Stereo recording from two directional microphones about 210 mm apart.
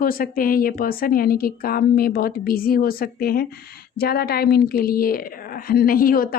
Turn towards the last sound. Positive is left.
turn(degrees=45)  # may be behind; listen again after turning